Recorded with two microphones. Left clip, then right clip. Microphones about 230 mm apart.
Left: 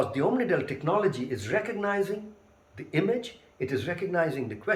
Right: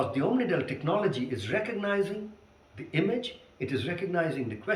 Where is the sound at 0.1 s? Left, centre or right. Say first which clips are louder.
Left 2 dB; centre.